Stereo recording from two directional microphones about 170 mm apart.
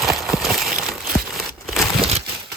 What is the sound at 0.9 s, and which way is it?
Crumpling, centre (ahead or behind).